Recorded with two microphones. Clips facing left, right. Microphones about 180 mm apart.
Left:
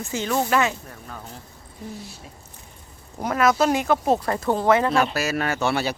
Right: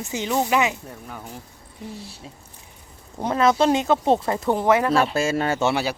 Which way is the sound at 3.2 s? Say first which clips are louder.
Right 1 dB; 25° right (ahead or behind).